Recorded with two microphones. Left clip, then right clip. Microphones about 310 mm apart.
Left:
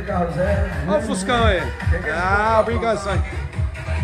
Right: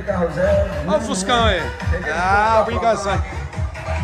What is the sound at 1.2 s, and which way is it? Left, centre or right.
Speech, centre.